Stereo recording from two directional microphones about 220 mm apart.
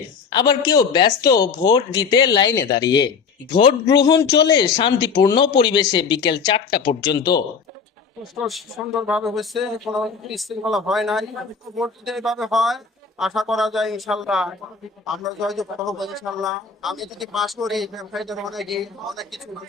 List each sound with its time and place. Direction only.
0.3 s a woman's voice: 20° left (ahead or behind)
8.2 s a man's voice: centre (ahead or behind)